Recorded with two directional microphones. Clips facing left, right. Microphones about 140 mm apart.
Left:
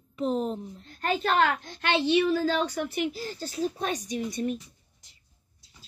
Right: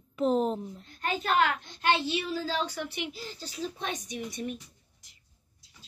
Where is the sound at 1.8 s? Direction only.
70° left (ahead or behind); by 4.6 s 45° left (ahead or behind).